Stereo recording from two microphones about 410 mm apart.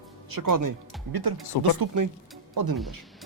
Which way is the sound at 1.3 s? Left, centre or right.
Right.